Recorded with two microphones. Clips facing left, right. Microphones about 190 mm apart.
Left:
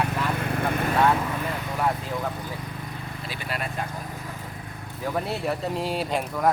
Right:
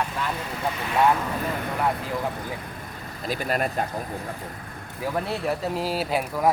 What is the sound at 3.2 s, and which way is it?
Speech, 45° right (ahead or behind).